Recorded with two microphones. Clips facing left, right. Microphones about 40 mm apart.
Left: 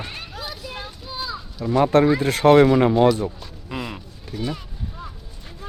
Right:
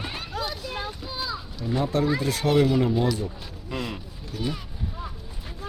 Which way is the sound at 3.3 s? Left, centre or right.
Centre.